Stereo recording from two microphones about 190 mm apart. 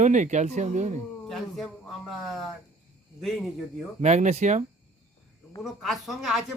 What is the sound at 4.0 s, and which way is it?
Speech, 35° right (ahead or behind).